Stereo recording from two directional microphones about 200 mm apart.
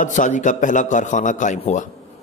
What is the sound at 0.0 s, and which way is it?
A man's voice, 40° left (ahead or behind).